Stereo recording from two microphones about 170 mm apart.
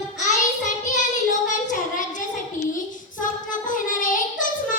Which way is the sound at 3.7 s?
50° left (ahead or behind).